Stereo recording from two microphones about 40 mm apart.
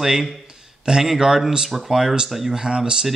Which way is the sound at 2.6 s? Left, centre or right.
Centre.